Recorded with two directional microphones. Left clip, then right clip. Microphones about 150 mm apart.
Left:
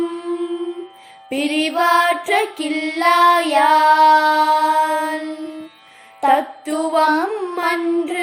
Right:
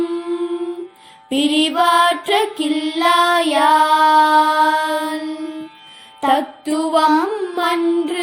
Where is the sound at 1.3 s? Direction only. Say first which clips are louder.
Right 3 dB; 35° right (ahead or behind).